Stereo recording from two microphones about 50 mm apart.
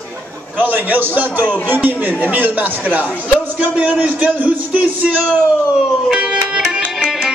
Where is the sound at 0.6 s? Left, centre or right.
Right.